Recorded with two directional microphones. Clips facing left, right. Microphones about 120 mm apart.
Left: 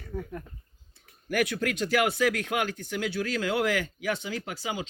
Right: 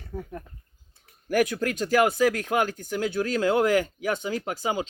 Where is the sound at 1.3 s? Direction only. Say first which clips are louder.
Right 4 dB; 40° right (ahead or behind).